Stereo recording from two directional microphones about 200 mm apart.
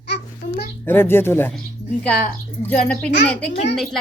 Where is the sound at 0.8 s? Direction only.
10° left (ahead or behind).